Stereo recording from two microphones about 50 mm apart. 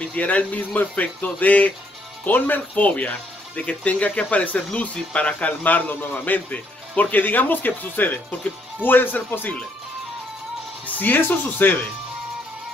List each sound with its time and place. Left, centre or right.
0.0 s speech: left
11.0 s speech: left